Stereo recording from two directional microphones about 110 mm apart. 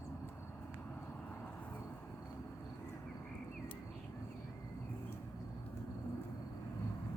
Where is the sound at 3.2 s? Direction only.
10° left (ahead or behind).